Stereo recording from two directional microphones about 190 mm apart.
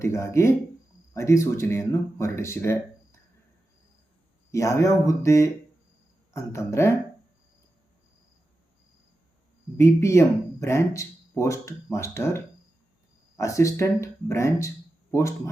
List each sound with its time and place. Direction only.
0.0 s speech: 15° left (ahead or behind)
4.5 s speech: 15° left (ahead or behind)
9.7 s speech: 15° left (ahead or behind)